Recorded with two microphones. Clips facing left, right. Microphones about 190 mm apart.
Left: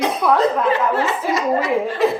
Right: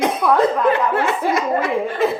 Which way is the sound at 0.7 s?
55° right (ahead or behind).